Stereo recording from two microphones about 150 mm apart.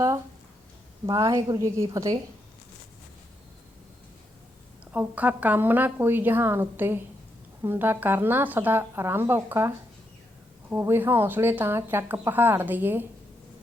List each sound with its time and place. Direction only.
1.0 s a woman's voice: 25° right (ahead or behind)
4.9 s speech: 10° right (ahead or behind)